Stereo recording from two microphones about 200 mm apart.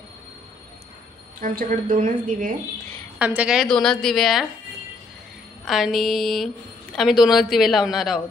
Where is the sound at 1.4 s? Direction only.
45° right (ahead or behind).